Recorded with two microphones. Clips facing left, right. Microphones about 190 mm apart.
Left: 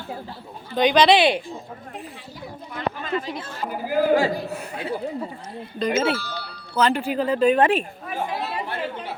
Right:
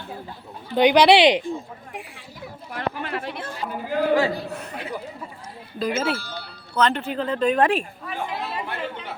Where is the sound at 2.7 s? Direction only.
70° right (ahead or behind).